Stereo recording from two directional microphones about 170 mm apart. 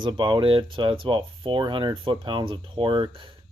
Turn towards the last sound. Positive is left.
turn(degrees=-30)  # may be behind; listen again after turning